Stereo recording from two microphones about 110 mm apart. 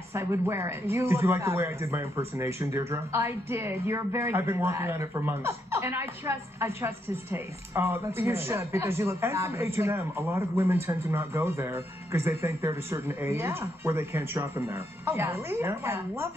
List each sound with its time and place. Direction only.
0.1 s speech: 25° right (ahead or behind)